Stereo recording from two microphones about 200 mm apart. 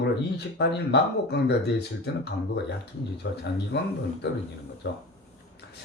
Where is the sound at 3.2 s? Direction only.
60° left (ahead or behind).